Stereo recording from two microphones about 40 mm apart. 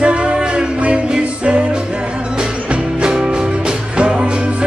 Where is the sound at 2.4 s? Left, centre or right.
Right.